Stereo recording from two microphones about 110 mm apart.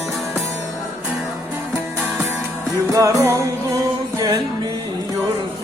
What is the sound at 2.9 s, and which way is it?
Music, 30° right (ahead or behind).